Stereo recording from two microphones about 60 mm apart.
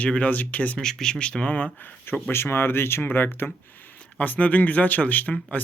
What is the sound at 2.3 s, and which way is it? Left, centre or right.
Speech, left.